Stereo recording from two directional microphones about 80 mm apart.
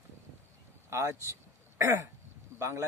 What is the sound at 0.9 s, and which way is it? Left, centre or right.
Throat clearing, right.